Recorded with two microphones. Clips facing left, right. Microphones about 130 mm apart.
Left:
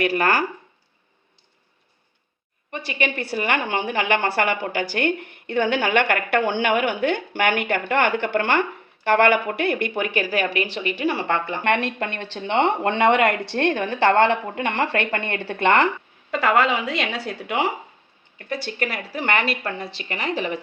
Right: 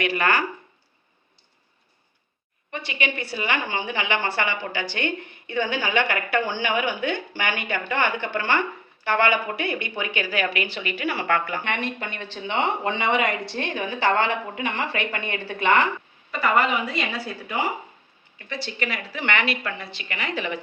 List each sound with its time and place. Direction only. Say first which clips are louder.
0.0 s a woman's voice: left 3 dB; 40° left (ahead or behind)
2.8 s a woman's voice: left 3 dB; 45° left (ahead or behind)
10.2 s a woman's voice: left 2 dB; 35° left (ahead or behind)
11.6 s a woman's voice: left 6 dB; 70° left (ahead or behind)
16.3 s a woman's voice: left 2 dB; 90° left
18.4 s a woman's voice: left 3 dB; 50° left (ahead or behind)